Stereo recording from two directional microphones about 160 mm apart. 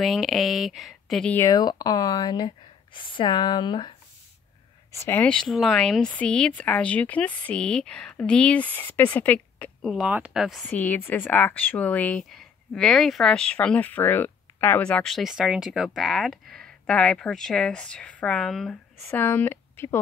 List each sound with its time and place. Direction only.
0.0 s speech: centre (ahead or behind)
1.5 s speech: 25° left (ahead or behind)
4.9 s a woman's voice: 15° left (ahead or behind); by 10.6 s 5° right (ahead or behind)
10.6 s speech: 10° left (ahead or behind)